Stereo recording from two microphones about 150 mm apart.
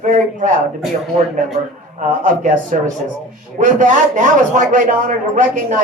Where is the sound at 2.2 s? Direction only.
60° right (ahead or behind).